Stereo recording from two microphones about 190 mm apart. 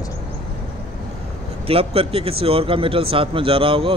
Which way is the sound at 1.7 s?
30° right (ahead or behind).